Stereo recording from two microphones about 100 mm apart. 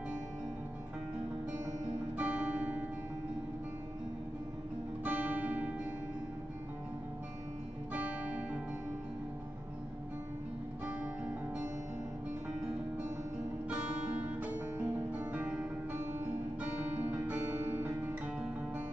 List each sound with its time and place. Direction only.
2.1 s music: 15° right (ahead or behind)
5.0 s music: 20° right (ahead or behind)
7.9 s guitar: 15° right (ahead or behind)
10.9 s music: 15° right (ahead or behind)
14.4 s music: 15° right (ahead or behind)